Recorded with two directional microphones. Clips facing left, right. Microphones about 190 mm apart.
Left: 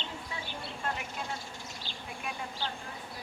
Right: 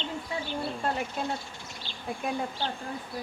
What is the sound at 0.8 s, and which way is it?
Speech, 35° right (ahead or behind).